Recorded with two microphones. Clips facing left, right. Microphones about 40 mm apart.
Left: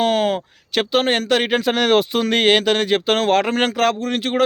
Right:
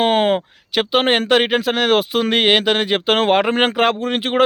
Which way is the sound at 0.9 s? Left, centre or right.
Right.